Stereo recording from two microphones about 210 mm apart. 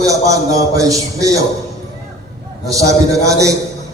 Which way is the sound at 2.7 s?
15° right (ahead or behind).